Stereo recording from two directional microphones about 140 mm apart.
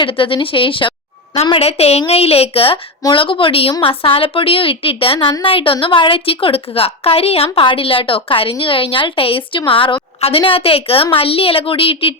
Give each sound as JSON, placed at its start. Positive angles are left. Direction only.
{"t": 0.0, "sound": "a woman's voice", "side_deg": 35}